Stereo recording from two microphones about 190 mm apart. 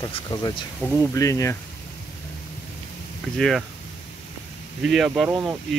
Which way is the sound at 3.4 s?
Centre (ahead or behind).